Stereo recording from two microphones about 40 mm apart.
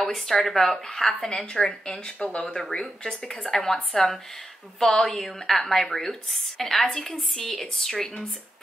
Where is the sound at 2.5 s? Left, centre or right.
Centre.